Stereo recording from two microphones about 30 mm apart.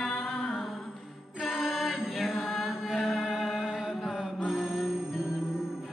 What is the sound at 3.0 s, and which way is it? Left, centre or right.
Music, left.